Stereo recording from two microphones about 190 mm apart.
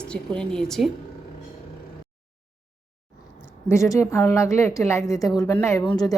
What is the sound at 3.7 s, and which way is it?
A woman's voice, 15° left (ahead or behind).